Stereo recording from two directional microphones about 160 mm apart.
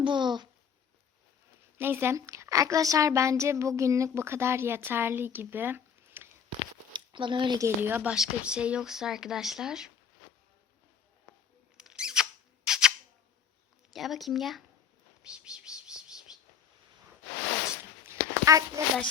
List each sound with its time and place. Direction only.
0.0 s a child's voice: 30° right (ahead or behind)
1.8 s a woman's voice: 15° right (ahead or behind)
6.9 s speech: 30° right (ahead or behind)
7.8 s speech: 10° right (ahead or behind)
11.8 s a sound: 5° right (ahead or behind)
13.9 s speech: centre (ahead or behind)
15.2 s bird: 5° right (ahead or behind)
18.0 s a sound: 20° right (ahead or behind)